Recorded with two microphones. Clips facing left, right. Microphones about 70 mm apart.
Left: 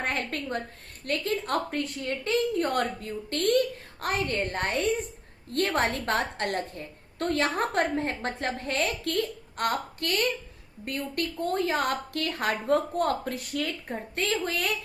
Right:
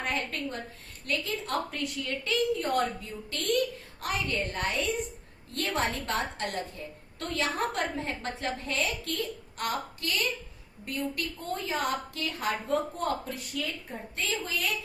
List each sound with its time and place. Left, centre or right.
0.0 s a woman's voice: left